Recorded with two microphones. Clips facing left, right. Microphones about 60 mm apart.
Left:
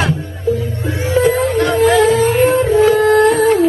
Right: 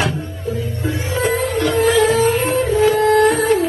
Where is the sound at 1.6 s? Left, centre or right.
Left.